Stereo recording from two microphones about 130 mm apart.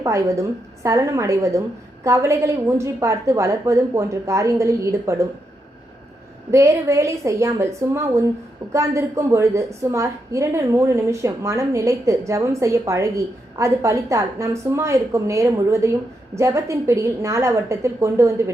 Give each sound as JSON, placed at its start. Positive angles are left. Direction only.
{"t": 0.0, "sound": "a woman's voice", "side_deg": -25}
{"t": 6.5, "sound": "a woman's voice", "side_deg": -25}